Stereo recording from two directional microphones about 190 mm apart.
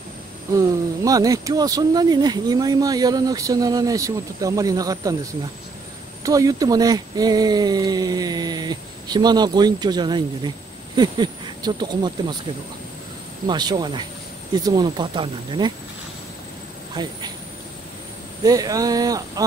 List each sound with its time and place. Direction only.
0.5 s speech: 15° right (ahead or behind)
6.2 s speech: 20° right (ahead or behind)
13.5 s speech: 20° right (ahead or behind)
16.9 s speech: 20° right (ahead or behind)
18.4 s speech: 20° right (ahead or behind)